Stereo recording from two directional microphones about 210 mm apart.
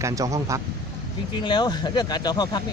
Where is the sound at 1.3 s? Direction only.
20° left (ahead or behind).